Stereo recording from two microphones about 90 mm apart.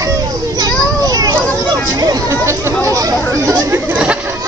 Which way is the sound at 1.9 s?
40° right (ahead or behind).